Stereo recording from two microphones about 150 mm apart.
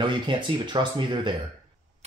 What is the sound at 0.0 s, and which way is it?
Speech, 30° right (ahead or behind).